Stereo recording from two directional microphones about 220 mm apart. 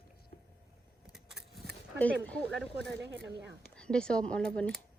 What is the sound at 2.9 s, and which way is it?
Speech, 55° right (ahead or behind).